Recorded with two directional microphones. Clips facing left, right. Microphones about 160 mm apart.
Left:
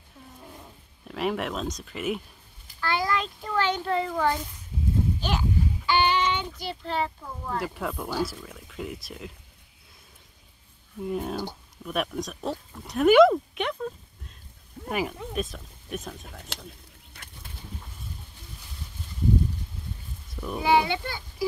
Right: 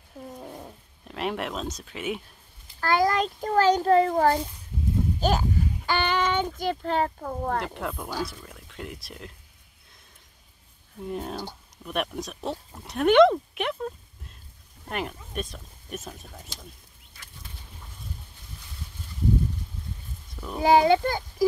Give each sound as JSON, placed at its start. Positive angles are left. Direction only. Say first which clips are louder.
{"t": 1.0, "sound": "speech", "louder": "left 2 dB", "side_deg": 0}
{"t": 2.8, "sound": "a child's voice", "louder": "right 4 dB", "side_deg": -45}
{"t": 7.2, "sound": "speech", "louder": "right 5 dB", "side_deg": -60}
{"t": 7.6, "sound": "speech", "louder": "left 1 dB", "side_deg": 0}
{"t": 11.1, "sound": "speech", "louder": "left 3 dB", "side_deg": 0}
{"t": 16.5, "sound": "speech", "louder": "left 4 dB", "side_deg": 70}
{"t": 20.5, "sound": "a child's voice", "louder": "right 5 dB", "side_deg": -40}